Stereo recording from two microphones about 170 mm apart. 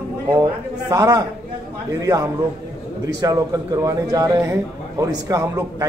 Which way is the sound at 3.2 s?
20° right (ahead or behind).